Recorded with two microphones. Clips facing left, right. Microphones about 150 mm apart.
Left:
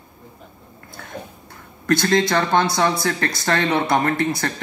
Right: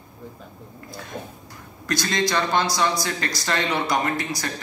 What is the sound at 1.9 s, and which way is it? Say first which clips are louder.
A man's voice: left 6 dB; 60° left (ahead or behind).